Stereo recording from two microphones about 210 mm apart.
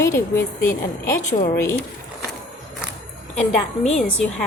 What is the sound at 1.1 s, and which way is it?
Speech, 40° left (ahead or behind).